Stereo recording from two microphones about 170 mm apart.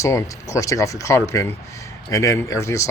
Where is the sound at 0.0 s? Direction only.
20° left (ahead or behind).